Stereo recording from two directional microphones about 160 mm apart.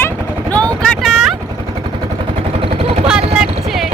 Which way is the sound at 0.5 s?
5° left (ahead or behind).